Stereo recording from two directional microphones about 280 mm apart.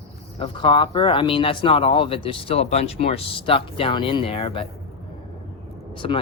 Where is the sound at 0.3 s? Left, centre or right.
Centre.